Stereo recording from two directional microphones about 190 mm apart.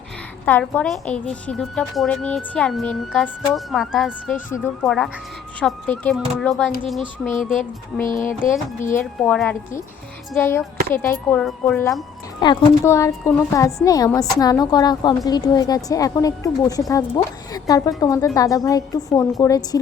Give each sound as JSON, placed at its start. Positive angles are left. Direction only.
{"t": 0.4, "sound": "a woman's voice", "side_deg": 10}
{"t": 4.4, "sound": "a woman's voice", "side_deg": 10}
{"t": 8.0, "sound": "speech", "side_deg": 45}
{"t": 9.2, "sound": "a woman's voice", "side_deg": 5}